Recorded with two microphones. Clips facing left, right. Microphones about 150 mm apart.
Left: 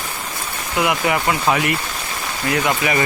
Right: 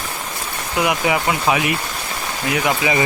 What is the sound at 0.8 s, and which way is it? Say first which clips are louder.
Speech: even; 20° right (ahead or behind).